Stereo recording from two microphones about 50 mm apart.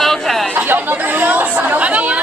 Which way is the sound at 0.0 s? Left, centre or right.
Centre.